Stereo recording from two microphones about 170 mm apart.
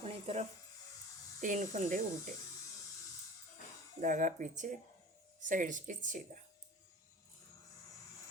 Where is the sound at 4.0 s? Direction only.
50° right (ahead or behind).